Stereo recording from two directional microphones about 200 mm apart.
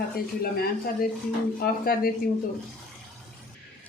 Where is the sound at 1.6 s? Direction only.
45° left (ahead or behind).